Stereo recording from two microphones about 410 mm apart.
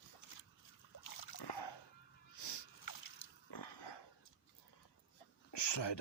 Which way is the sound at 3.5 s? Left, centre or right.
Left.